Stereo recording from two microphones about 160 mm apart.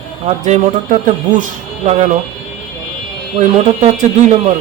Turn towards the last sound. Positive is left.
turn(degrees=-45)  # may be behind; listen again after turning